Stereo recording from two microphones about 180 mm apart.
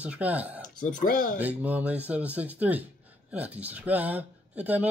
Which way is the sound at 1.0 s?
45° left (ahead or behind).